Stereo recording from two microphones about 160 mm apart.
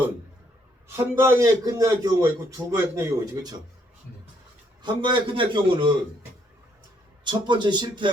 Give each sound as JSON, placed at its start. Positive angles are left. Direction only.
{"t": 0.9, "sound": "a man's voice", "side_deg": -15}
{"t": 4.8, "sound": "a man's voice", "side_deg": -30}
{"t": 7.3, "sound": "a man's voice", "side_deg": -30}